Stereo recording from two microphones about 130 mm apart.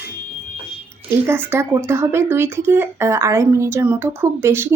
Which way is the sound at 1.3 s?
20° right (ahead or behind).